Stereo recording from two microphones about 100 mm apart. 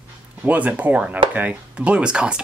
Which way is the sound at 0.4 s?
15° right (ahead or behind).